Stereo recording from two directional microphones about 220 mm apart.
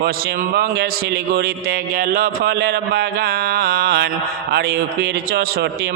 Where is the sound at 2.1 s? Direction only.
45° right (ahead or behind).